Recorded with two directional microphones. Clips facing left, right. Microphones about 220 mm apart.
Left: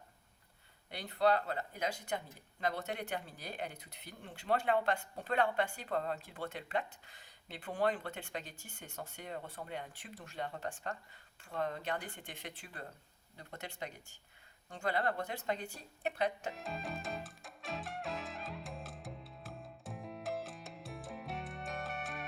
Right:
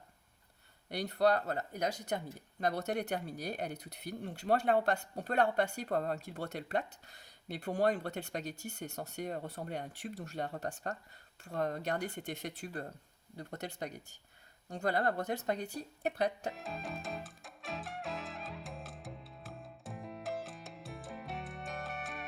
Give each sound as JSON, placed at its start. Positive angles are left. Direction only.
{"t": 0.9, "sound": "speech", "side_deg": -40}
{"t": 16.5, "sound": "music", "side_deg": 0}